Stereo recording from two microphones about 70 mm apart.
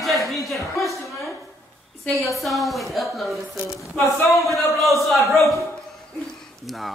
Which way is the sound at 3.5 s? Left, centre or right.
Left.